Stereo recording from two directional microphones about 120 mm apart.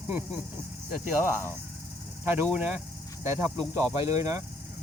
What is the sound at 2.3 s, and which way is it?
Speech, 15° right (ahead or behind).